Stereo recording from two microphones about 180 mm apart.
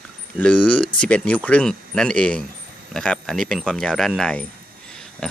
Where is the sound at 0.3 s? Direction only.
5° left (ahead or behind).